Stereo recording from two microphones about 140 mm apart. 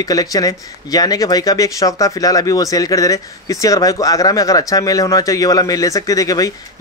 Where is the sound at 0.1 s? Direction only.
25° left (ahead or behind).